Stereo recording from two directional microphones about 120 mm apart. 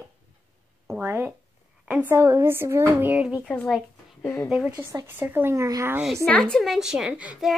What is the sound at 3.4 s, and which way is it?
Speech, 5° left (ahead or behind).